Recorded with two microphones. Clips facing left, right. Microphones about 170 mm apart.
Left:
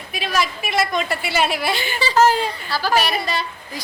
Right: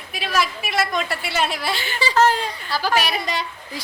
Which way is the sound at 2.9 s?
15° right (ahead or behind).